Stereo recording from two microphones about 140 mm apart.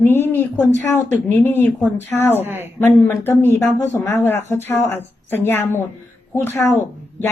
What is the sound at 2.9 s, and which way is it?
Speech, 15° left (ahead or behind).